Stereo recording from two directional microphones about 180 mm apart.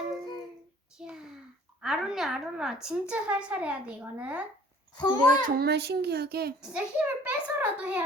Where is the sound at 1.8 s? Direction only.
Centre (ahead or behind).